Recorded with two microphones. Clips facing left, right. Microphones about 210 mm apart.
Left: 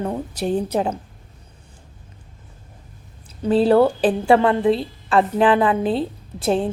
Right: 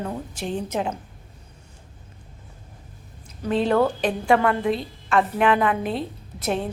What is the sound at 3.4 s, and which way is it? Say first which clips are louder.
A woman's voice: left 5 dB; 35° left (ahead or behind).